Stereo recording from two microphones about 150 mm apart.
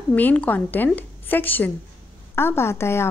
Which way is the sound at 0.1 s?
10° left (ahead or behind).